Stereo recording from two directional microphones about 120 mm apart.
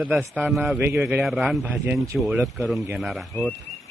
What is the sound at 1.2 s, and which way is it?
Speech, centre (ahead or behind).